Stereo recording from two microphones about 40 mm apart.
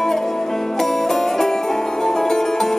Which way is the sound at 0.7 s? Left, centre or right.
Centre.